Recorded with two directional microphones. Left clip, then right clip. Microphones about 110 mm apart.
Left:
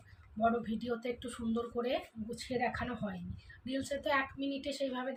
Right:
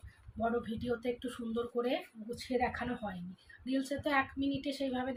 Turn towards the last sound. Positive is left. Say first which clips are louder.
# even
turn(degrees=0)  # may be behind; listen again after turning